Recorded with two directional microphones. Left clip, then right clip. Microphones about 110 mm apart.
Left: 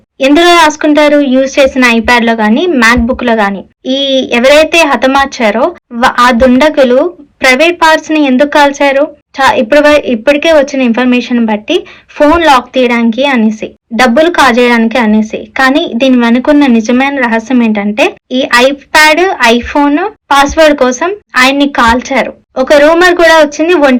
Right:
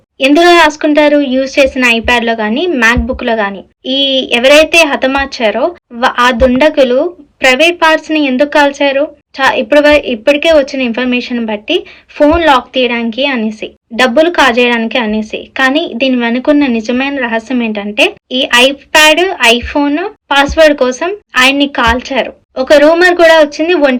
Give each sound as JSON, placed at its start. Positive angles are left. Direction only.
{"t": 0.3, "sound": "a woman's voice", "side_deg": -35}
{"t": 6.4, "sound": "a woman's voice", "side_deg": -35}